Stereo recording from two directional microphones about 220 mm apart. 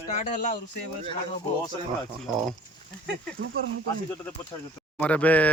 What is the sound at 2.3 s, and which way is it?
Speech, centre (ahead or behind).